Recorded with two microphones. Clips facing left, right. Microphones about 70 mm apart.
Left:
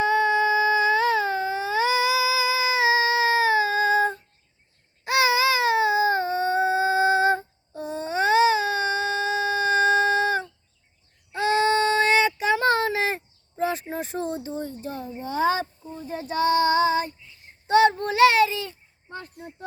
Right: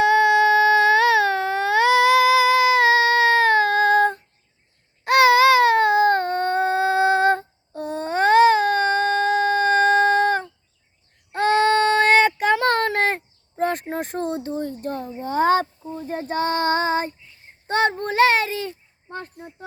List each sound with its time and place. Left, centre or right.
0.0 s baby cry: right
11.3 s child singing: right
17.7 s a sound: right